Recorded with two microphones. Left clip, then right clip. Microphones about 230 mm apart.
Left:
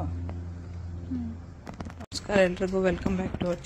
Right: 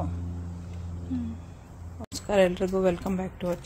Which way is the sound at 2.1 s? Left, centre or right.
Centre.